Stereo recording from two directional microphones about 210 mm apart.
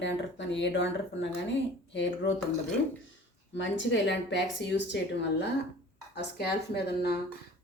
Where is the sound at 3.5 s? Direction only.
60° left (ahead or behind).